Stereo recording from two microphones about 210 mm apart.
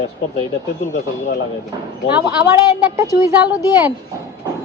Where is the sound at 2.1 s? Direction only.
10° right (ahead or behind).